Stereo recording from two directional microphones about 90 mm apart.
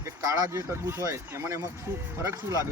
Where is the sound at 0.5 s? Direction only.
30° right (ahead or behind).